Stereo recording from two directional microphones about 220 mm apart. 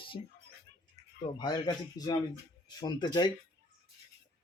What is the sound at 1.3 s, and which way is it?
Speech, 20° left (ahead or behind).